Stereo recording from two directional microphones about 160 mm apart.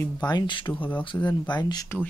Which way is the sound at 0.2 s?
25° left (ahead or behind).